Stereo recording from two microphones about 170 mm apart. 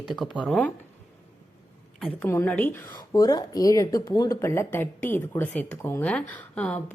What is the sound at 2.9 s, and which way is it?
Speech, 20° left (ahead or behind).